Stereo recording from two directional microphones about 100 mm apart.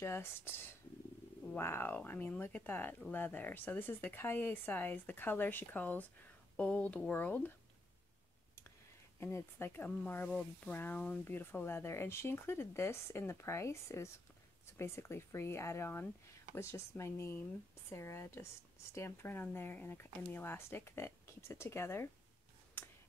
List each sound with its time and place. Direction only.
0.0 s speech: 25° left (ahead or behind)
9.2 s speech: 25° left (ahead or behind)
22.8 s a sound: 20° left (ahead or behind)